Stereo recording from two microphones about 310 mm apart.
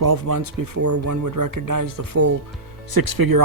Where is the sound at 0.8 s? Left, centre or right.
Right.